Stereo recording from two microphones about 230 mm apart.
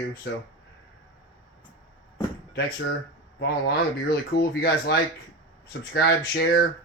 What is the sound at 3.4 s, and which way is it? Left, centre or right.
Speech, left.